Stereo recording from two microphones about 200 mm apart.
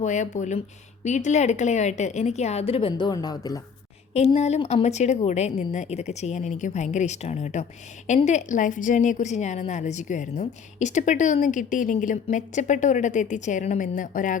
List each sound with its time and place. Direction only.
0.0 s a woman's voice: 35° left (ahead or behind); by 3.6 s 20° left (ahead or behind)
4.1 s a woman's voice: 30° left (ahead or behind)